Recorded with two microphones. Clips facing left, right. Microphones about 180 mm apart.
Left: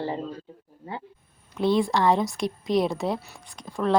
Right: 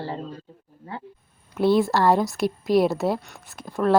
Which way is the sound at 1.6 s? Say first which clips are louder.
Right 3 dB; 5° right (ahead or behind).